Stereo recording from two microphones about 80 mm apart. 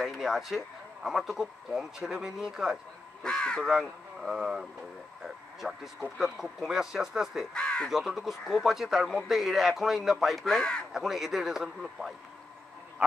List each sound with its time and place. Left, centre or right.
0.0 s a man's voice: centre
3.2 s speech: centre
3.6 s a man's voice: centre
7.5 s speech: centre
7.9 s a man's voice: centre
10.4 s speech: centre
10.9 s a man's voice: centre